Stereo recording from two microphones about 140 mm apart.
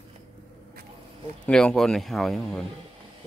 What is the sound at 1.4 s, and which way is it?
A man's voice, 5° left (ahead or behind).